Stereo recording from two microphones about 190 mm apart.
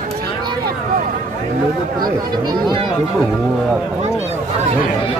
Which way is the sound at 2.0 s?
20° right (ahead or behind).